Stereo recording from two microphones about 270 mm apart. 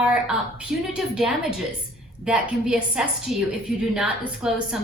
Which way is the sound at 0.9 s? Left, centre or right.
Centre.